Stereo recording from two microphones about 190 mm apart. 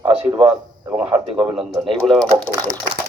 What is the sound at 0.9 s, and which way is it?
A man's voice, 5° right (ahead or behind).